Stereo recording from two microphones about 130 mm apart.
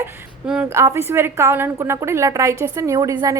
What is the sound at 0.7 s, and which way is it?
A woman's voice, 20° right (ahead or behind).